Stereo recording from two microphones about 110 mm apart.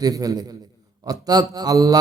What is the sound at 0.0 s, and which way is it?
A man's voice, 35° right (ahead or behind).